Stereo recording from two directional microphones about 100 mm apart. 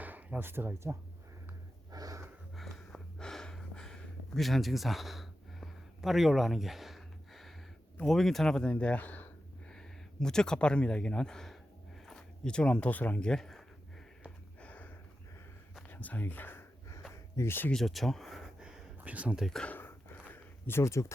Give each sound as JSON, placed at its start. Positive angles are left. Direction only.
{"t": 0.0, "sound": "speech", "side_deg": -15}
{"t": 1.9, "sound": "wheeze", "side_deg": -40}
{"t": 2.6, "sound": "a sound", "side_deg": 5}
{"t": 8.0, "sound": "speech", "side_deg": 5}
{"t": 9.7, "sound": "speech", "side_deg": 5}
{"t": 14.3, "sound": "a sound", "side_deg": 15}
{"t": 17.7, "sound": "speech", "side_deg": 5}
{"t": 19.5, "sound": "speech", "side_deg": 5}
{"t": 19.7, "sound": "a sound", "side_deg": 20}